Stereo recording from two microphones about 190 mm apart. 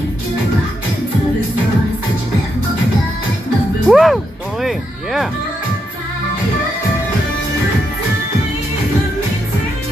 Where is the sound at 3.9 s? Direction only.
Centre (ahead or behind).